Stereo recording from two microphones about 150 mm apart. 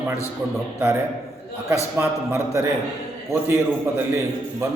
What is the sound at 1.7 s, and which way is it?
A man's voice, 20° right (ahead or behind).